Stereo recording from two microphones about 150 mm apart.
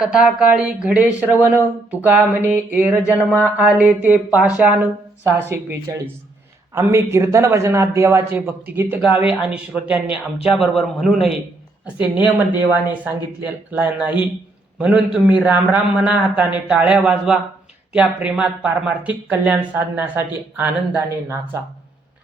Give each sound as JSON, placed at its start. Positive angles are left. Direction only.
{"t": 0.0, "sound": "a man's voice", "side_deg": -5}